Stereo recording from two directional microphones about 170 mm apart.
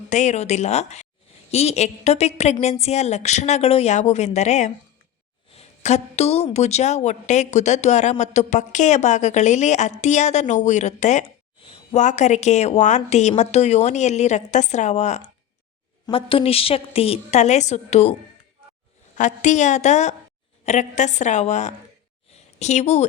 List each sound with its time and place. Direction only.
0.1 s a woman's voice: 45° left (ahead or behind)
19.1 s a woman's voice: 45° left (ahead or behind)
22.3 s a sound: 40° left (ahead or behind)